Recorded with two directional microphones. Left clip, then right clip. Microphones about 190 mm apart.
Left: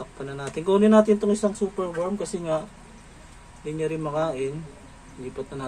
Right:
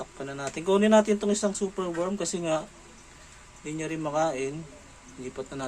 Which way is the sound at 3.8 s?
20° right (ahead or behind).